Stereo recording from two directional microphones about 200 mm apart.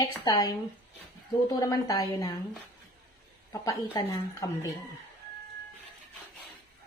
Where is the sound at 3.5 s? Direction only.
20° left (ahead or behind).